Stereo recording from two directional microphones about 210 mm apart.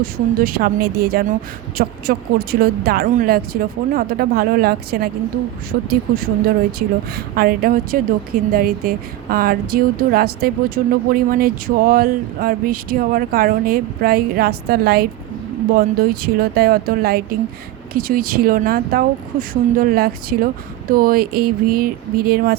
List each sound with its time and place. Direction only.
0.0 s a woman's voice: 45° right (ahead or behind)